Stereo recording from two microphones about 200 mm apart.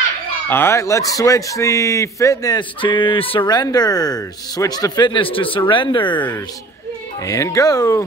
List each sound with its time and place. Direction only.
0.5 s a man's voice: 10° left (ahead or behind)